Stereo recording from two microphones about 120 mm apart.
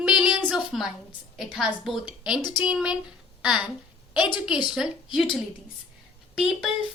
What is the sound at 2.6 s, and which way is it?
Speech, 5° right (ahead or behind).